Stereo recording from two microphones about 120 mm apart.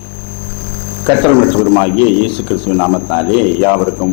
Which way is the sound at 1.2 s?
25° left (ahead or behind).